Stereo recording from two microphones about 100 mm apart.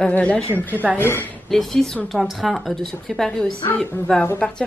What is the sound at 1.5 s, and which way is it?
Speech, 5° left (ahead or behind).